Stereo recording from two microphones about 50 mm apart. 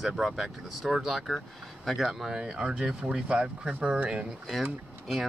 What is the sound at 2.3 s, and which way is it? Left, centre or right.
Speech, centre.